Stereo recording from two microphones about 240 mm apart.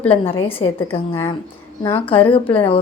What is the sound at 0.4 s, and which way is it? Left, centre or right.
Speech, centre.